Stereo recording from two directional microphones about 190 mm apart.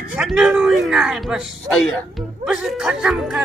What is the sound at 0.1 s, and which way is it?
Speech, 5° right (ahead or behind).